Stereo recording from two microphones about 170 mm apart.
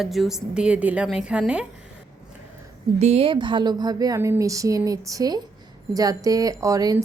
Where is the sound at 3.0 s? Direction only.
35° right (ahead or behind).